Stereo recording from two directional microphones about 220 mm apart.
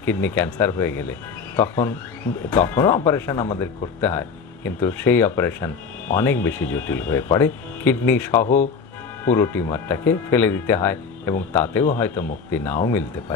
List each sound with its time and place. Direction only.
0.0 s speech: 10° left (ahead or behind)
8.4 s speech: 35° left (ahead or behind)
9.2 s speech: 10° left (ahead or behind)